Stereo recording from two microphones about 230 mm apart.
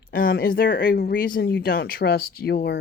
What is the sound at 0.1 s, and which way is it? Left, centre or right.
Speech, left.